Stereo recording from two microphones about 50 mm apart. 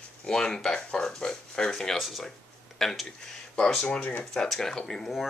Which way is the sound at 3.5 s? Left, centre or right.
Centre.